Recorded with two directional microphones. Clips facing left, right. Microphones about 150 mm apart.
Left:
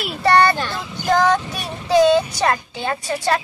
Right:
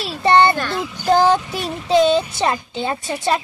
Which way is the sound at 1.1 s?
30° right (ahead or behind).